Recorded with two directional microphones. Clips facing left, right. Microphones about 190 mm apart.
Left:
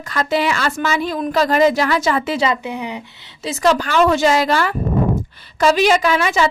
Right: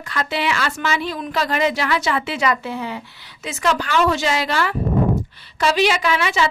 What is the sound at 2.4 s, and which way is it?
Speech, 20° left (ahead or behind).